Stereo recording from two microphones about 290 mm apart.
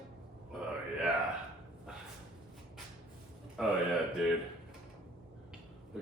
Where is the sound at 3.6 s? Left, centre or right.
Centre.